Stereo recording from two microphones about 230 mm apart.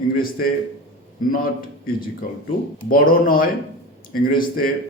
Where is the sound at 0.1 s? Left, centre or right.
Left.